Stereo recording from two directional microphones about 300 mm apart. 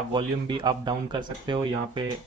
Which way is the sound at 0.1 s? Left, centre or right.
Centre.